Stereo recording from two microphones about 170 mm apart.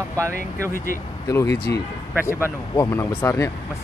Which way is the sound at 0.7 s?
55° left (ahead or behind).